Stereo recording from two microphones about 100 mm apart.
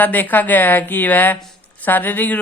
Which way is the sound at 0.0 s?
20° left (ahead or behind).